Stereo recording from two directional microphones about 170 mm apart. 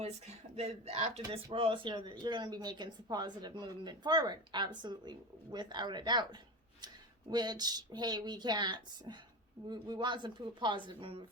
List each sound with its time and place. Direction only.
0.5 s a woman's voice: 40° right (ahead or behind)